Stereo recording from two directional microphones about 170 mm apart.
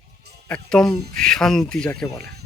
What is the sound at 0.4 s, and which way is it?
Speech, 5° left (ahead or behind).